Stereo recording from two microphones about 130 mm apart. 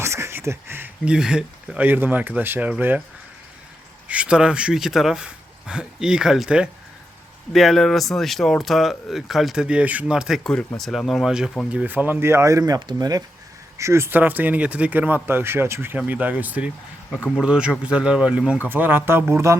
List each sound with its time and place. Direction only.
0.0 s speech: 20° right (ahead or behind)
4.1 s speech: 10° right (ahead or behind)